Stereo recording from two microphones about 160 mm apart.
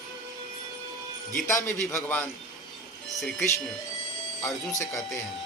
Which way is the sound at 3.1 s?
Centre (ahead or behind).